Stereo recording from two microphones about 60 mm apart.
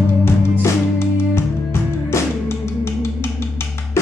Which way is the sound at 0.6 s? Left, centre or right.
Left.